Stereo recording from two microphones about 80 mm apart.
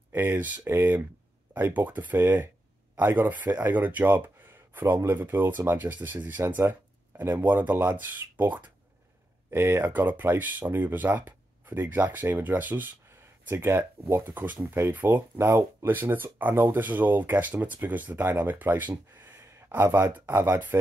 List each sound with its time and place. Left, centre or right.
0.1 s speech: right
9.5 s speech: right